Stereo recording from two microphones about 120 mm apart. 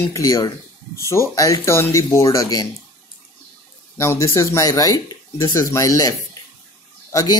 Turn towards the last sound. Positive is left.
turn(degrees=30)  # may be behind; listen again after turning